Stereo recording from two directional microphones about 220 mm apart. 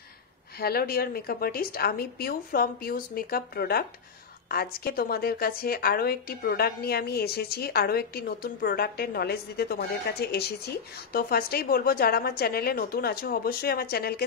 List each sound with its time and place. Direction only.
0.6 s speech: 45° left (ahead or behind)